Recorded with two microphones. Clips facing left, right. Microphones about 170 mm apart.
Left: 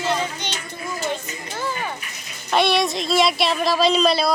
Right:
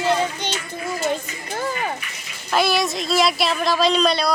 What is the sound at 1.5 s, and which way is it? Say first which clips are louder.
Speech: right 3 dB; 45° right (ahead or behind).